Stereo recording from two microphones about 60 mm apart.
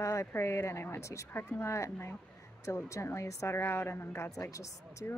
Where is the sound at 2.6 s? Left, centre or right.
Left.